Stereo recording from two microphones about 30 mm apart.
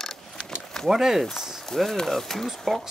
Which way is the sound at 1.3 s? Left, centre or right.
Centre.